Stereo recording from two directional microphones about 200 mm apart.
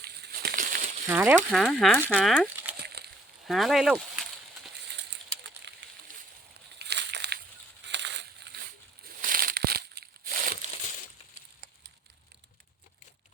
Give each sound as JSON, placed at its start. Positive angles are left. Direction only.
{"t": 0.0, "sound": "a sound", "side_deg": -55}
{"t": 1.0, "sound": "speech", "side_deg": -10}
{"t": 1.5, "sound": "speech", "side_deg": 0}
{"t": 2.8, "sound": "slosh", "side_deg": -55}
{"t": 3.4, "sound": "speech", "side_deg": 0}
{"t": 5.7, "sound": "a sound", "side_deg": -60}
{"t": 9.0, "sound": "crumpling", "side_deg": -45}